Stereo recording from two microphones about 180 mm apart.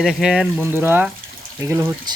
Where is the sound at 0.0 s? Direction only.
Centre (ahead or behind).